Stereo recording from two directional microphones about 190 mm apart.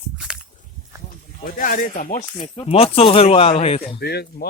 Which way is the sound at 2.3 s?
25° left (ahead or behind).